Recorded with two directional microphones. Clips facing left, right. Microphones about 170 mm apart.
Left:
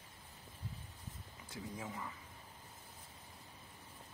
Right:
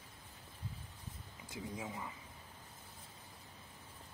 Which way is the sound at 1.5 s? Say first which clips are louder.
Right 2 dB; 15° right (ahead or behind).